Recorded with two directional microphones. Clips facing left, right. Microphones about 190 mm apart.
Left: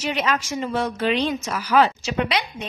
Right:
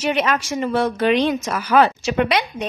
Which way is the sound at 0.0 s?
55° right (ahead or behind).